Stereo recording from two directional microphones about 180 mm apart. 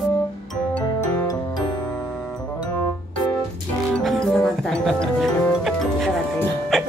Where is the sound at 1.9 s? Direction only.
5° left (ahead or behind).